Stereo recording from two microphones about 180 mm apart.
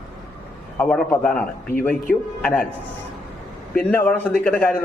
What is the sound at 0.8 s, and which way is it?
A man's voice, 10° left (ahead or behind).